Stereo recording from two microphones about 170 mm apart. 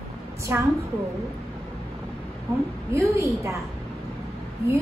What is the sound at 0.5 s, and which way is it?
Speech, 15° right (ahead or behind).